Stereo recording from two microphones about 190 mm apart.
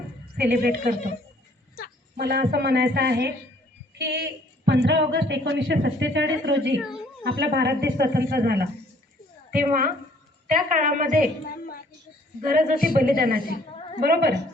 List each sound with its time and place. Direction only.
0.4 s a woman's voice: 50° right (ahead or behind)
2.1 s a woman's voice: 55° right (ahead or behind)
11.4 s a sound: 50° left (ahead or behind)
12.4 s a woman's voice: 45° right (ahead or behind)